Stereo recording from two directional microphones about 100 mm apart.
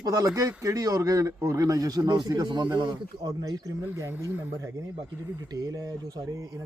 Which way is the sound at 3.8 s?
25° right (ahead or behind).